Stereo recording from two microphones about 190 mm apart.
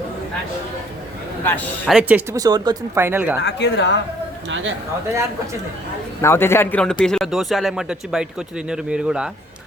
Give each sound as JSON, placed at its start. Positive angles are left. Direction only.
{"t": 1.9, "sound": "speech", "side_deg": -5}
{"t": 2.3, "sound": "speech", "side_deg": -20}
{"t": 3.4, "sound": "speech", "side_deg": 65}
{"t": 4.4, "sound": "speech", "side_deg": -80}
{"t": 6.2, "sound": "a man's voice", "side_deg": 15}